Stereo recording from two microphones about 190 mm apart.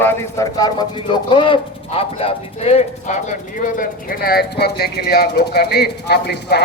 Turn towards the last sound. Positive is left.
turn(degrees=60)  # may be behind; listen again after turning